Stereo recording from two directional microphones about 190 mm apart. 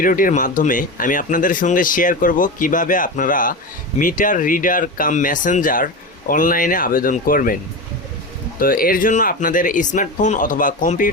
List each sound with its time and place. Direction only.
0.0 s speech: 45° left (ahead or behind)
8.5 s speech: 50° left (ahead or behind)